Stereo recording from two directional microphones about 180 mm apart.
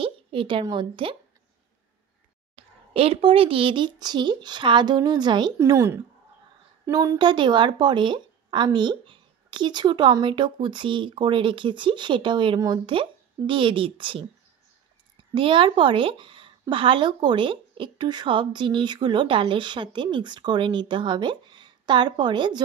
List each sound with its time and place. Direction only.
0.0 s a woman's voice: 30° right (ahead or behind)
2.5 s a woman's voice: 30° right (ahead or behind)
15.3 s a woman's voice: 30° right (ahead or behind)